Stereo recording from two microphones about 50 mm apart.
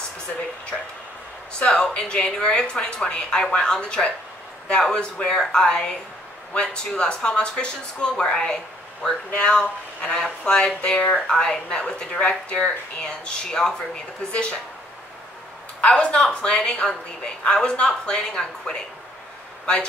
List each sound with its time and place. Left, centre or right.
1.6 s a woman's voice: left
12.5 s a woman's voice: centre
15.8 s a woman's voice: left